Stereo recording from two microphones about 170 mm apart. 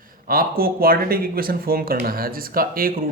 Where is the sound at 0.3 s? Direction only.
60° right (ahead or behind).